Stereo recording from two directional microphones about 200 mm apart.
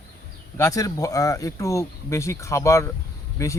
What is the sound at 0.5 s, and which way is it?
Speech, 15° left (ahead or behind).